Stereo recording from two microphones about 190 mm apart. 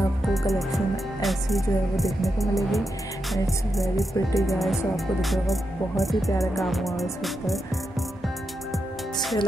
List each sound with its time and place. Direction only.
0.5 s speech: centre (ahead or behind)
4.1 s speech: 15° left (ahead or behind)
4.6 s speech: centre (ahead or behind)
8.7 s music: centre (ahead or behind)